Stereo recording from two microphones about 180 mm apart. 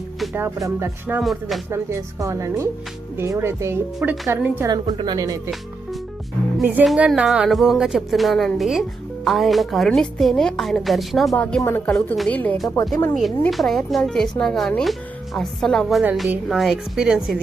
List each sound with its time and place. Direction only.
0.3 s a woman's voice: 15° right (ahead or behind)
1.2 s a woman's voice: centre (ahead or behind)
1.7 s a woman's voice: 15° right (ahead or behind)
4.7 s a woman's voice: 25° right (ahead or behind)
6.6 s a woman's voice: 5° right (ahead or behind); by 13.1 s 10° left (ahead or behind)
13.1 s a woman's voice: centre (ahead or behind)